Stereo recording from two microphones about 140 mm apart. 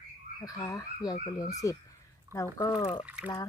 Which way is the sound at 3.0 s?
10° right (ahead or behind).